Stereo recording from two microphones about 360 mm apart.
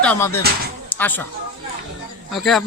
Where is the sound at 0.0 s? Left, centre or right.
Centre.